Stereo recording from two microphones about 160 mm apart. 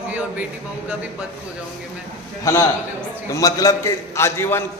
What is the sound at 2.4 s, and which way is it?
A man's voice, 20° left (ahead or behind).